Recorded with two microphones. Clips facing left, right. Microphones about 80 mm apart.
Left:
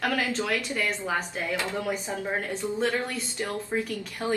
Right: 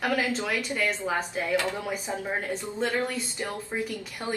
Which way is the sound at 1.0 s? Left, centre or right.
Centre.